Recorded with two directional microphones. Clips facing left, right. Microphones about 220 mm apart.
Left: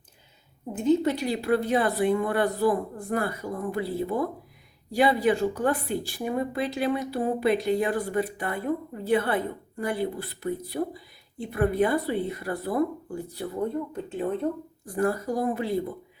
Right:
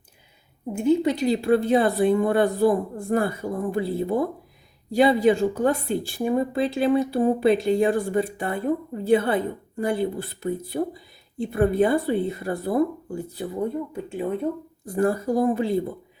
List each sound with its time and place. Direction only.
0.7 s speech: 10° right (ahead or behind)
1.1 s speech: 20° right (ahead or behind)
13.6 s speech: 10° right (ahead or behind)
14.8 s speech: 25° right (ahead or behind)